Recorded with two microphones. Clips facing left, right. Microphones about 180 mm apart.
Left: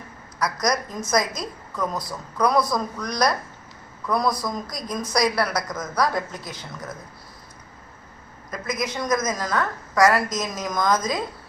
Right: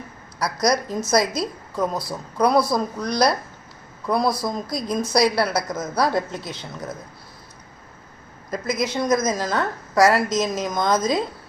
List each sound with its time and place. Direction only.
0.3 s a woman's voice: 30° right (ahead or behind)
8.4 s a woman's voice: 30° right (ahead or behind)